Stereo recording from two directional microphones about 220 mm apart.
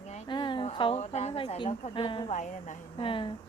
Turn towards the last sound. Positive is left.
turn(degrees=25)  # may be behind; listen again after turning